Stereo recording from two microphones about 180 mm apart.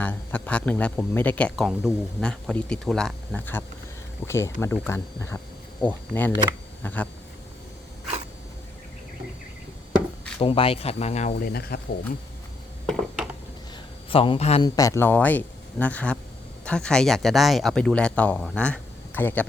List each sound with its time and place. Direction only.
0.0 s speech: 10° left (ahead or behind)
10.4 s speech: 30° left (ahead or behind)
11.3 s speech: 55° left (ahead or behind)
12.8 s a sound: 5° right (ahead or behind)
14.1 s speech: 30° left (ahead or behind)
14.6 s speech: 20° left (ahead or behind)